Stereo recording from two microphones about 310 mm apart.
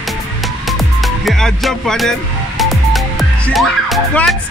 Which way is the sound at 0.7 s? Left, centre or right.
Centre.